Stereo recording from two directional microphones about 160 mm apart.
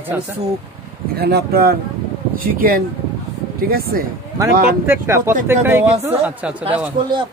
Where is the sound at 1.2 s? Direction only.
85° right.